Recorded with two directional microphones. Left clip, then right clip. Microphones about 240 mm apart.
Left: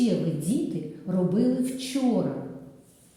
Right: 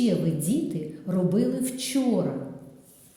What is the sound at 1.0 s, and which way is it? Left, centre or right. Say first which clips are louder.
Speech: even; right.